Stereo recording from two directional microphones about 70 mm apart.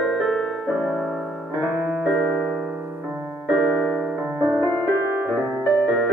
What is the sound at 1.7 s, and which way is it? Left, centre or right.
Piano, right.